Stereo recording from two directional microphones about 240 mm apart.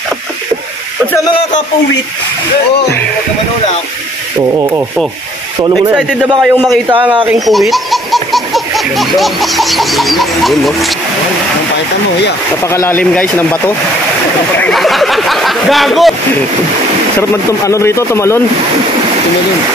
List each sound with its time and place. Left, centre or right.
4.6 s rub: centre
5.9 s speech: centre
6.9 s speech: centre
7.2 s baby laughter: centre
12.7 s a man's voice: centre
17.2 s a man's voice: centre